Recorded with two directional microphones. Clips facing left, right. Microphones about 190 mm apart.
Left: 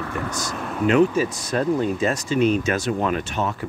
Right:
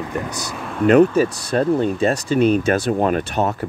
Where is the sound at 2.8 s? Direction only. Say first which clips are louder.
Right 4 dB; 45° right (ahead or behind).